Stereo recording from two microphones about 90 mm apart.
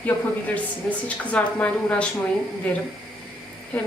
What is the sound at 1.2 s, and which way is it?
Speech, 15° left (ahead or behind).